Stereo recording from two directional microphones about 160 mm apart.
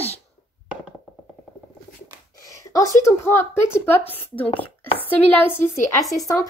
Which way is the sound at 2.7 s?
20° left (ahead or behind).